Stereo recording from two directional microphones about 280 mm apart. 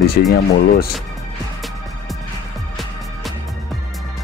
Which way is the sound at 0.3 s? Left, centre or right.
Left.